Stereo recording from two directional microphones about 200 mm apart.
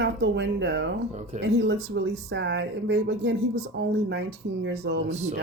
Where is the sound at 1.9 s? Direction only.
60° right (ahead or behind).